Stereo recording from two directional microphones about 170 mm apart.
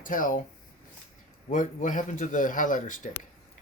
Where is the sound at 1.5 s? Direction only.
50° left (ahead or behind).